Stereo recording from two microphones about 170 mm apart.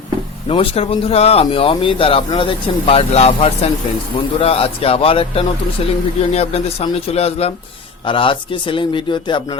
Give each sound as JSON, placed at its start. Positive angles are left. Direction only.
{"t": 0.4, "sound": "a man's voice", "side_deg": 35}